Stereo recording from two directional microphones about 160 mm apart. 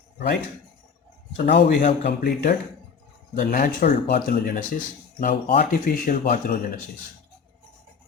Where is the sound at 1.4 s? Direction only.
90° left; by 2.6 s 75° left (ahead or behind).